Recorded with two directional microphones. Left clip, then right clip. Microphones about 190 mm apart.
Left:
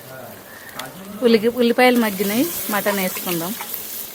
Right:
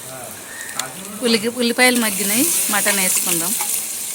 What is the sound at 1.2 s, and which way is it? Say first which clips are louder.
Speech: left 3 dB; 35° left (ahead or behind).